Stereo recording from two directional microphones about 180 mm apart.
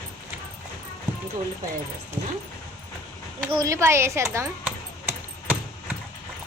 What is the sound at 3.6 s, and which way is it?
Speech, 15° right (ahead or behind).